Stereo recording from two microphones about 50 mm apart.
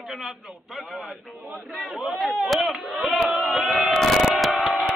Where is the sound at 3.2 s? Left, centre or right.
Right.